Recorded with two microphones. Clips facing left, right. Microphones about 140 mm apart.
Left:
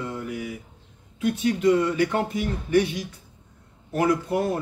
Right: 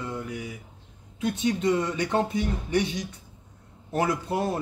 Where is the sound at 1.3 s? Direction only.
25° right (ahead or behind).